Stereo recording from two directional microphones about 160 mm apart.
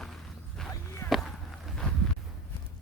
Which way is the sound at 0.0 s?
5° left (ahead or behind).